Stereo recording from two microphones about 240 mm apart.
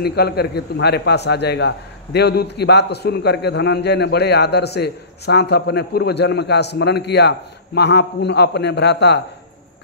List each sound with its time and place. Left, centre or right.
0.0 s a man's voice: left